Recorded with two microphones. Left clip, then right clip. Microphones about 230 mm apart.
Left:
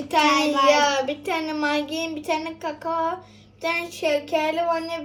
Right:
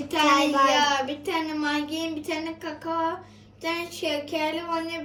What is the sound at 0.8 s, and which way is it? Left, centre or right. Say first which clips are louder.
A woman's voice: left 2 dB; centre.